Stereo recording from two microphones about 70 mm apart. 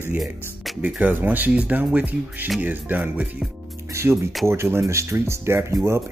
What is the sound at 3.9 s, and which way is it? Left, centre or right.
Music, right.